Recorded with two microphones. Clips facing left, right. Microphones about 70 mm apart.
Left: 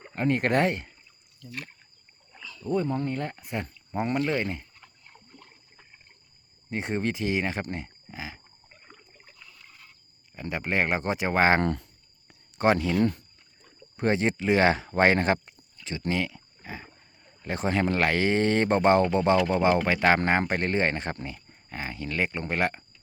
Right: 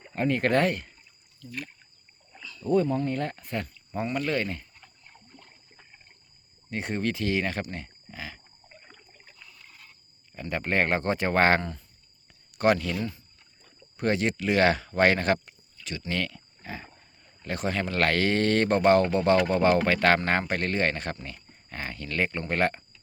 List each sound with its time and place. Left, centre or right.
0.0 s speech: left
2.3 s rowboat: centre
2.8 s speech: left
3.1 s speech: centre
6.7 s speech: left
8.9 s a sound: centre
10.5 s speech: centre
11.6 s speech: left
12.5 s speech: left
13.0 s speech: left
13.9 s speech: left; by 22.8 s centre